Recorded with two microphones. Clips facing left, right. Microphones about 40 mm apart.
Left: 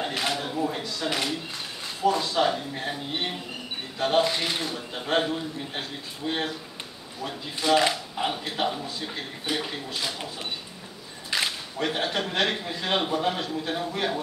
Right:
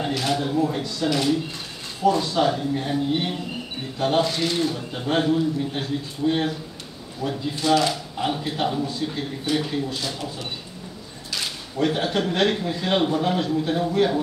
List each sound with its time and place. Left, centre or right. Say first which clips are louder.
0.3 s a man's voice: right 5 dB; centre
7.7 s speech: even; centre
8.3 s speech: right 4 dB; centre
11.2 s a sound: left 3 dB; left
11.8 s a man's voice: right 5 dB; centre